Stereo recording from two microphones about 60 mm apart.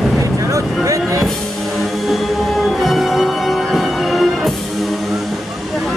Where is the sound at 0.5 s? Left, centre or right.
Right.